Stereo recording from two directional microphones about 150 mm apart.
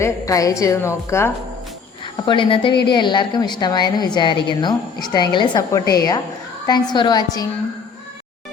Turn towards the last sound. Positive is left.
turn(degrees=30)  # may be behind; listen again after turning